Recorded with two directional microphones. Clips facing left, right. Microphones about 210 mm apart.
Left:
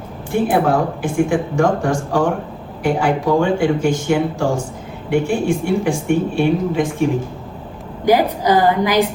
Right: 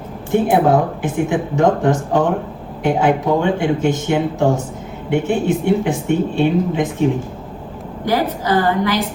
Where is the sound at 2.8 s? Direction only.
20° right (ahead or behind).